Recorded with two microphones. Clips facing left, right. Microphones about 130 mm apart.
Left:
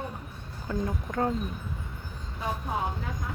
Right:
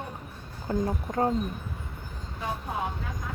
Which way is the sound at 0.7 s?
35° right (ahead or behind).